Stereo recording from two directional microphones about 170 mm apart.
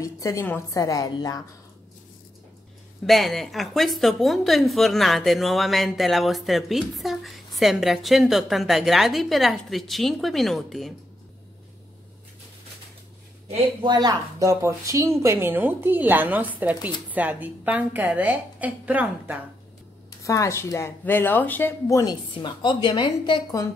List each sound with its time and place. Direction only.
0.0 s speech: 20° left (ahead or behind)
3.1 s a woman's voice: centre (ahead or behind)
13.8 s a woman's voice: 25° right (ahead or behind); by 19.3 s 10° right (ahead or behind)
20.2 s speech: 15° left (ahead or behind)